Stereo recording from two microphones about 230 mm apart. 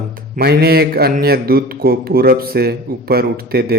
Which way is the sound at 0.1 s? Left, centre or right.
Right.